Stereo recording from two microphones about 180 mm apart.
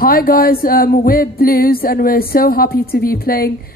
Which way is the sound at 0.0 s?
55° left (ahead or behind).